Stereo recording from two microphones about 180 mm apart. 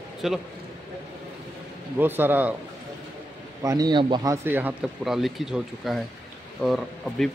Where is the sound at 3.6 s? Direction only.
20° right (ahead or behind).